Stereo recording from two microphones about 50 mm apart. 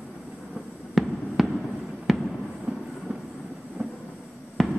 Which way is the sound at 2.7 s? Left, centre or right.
Right.